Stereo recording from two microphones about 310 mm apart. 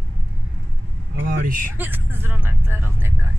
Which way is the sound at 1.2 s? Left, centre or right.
Right.